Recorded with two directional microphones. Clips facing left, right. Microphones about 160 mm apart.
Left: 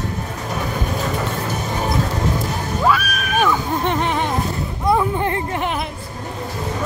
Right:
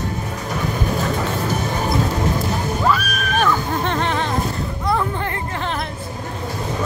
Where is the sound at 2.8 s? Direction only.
5° left (ahead or behind).